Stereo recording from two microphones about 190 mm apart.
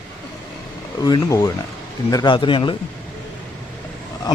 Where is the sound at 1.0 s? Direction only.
20° left (ahead or behind).